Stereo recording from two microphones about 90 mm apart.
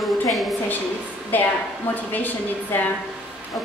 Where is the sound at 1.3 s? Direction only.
20° left (ahead or behind).